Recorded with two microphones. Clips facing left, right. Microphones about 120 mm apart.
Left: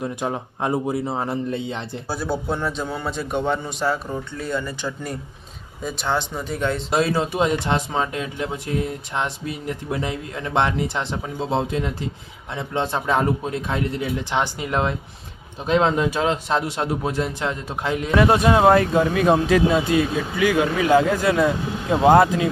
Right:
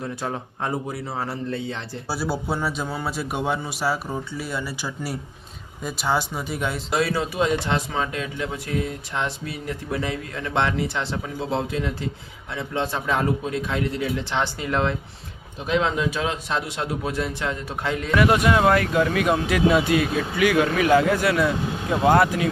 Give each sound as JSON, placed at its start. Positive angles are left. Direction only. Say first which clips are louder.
{"t": 0.0, "sound": "a man's voice", "louder": "left 3 dB", "side_deg": 15}
{"t": 2.0, "sound": "a man's voice", "louder": "left 1 dB", "side_deg": -5}
{"t": 6.9, "sound": "a man's voice", "louder": "left 2 dB", "side_deg": 25}
{"t": 14.3, "sound": "speech", "louder": "left 2 dB", "side_deg": 15}
{"t": 15.6, "sound": "a man's voice", "louder": "left 4 dB", "side_deg": 40}